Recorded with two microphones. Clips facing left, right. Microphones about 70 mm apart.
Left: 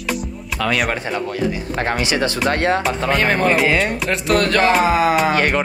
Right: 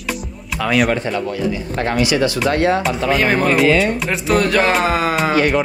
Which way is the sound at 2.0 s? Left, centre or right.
Left.